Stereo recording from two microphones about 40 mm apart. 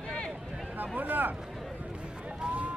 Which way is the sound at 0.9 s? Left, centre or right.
Right.